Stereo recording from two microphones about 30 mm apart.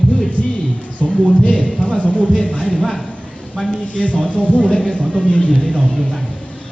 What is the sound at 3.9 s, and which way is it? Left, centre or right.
Speech, left.